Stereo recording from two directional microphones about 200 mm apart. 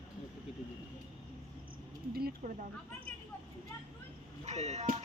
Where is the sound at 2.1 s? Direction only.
50° right (ahead or behind).